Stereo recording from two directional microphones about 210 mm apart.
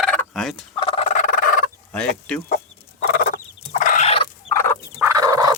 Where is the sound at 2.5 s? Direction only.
40° left (ahead or behind).